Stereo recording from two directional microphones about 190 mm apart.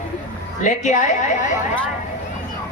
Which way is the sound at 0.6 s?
40° left (ahead or behind).